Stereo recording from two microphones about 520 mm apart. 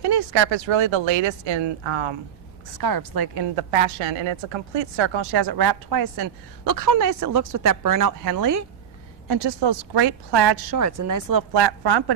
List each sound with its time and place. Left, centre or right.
0.0 s speech: right
2.8 s a woman's voice: right
3.5 s a woman's voice: right
9.3 s a woman's voice: right
10.8 s a woman's voice: right